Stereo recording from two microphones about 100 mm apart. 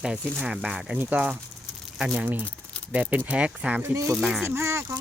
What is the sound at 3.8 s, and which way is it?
Speech, 30° right (ahead or behind).